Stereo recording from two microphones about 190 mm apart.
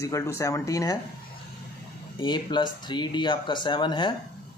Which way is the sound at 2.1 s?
25° left (ahead or behind).